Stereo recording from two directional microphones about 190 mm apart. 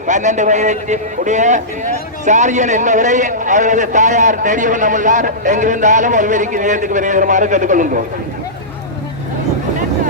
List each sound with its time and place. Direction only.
0.1 s a man's voice: 40° right (ahead or behind)